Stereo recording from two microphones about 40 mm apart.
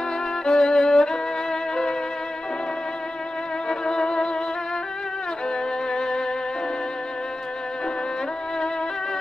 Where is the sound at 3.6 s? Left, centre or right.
Centre.